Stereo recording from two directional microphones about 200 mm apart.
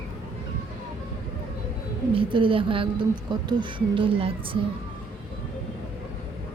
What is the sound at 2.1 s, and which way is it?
A woman's voice, 25° right (ahead or behind).